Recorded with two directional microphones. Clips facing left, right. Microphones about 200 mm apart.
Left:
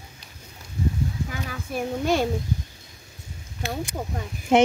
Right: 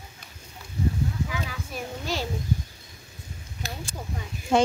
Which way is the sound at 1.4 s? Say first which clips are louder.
Left 6 dB; 55° left (ahead or behind).